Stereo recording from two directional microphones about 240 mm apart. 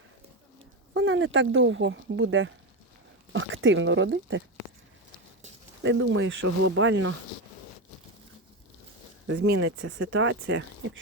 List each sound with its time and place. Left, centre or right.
0.9 s speech: right
5.8 s speech: right
9.2 s speech: right